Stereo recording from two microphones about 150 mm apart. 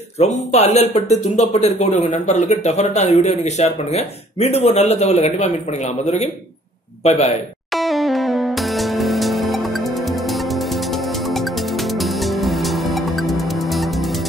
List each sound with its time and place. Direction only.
0.2 s a man's voice: 45° left (ahead or behind)
7.7 s music: centre (ahead or behind)